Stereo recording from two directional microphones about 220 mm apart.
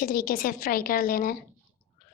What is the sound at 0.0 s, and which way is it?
A woman's voice, 40° left (ahead or behind).